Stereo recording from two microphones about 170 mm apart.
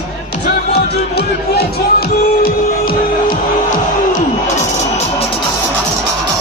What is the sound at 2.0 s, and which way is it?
Music, 60° left (ahead or behind).